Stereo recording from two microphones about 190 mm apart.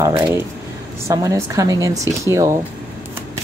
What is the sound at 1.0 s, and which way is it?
Speech, 15° right (ahead or behind).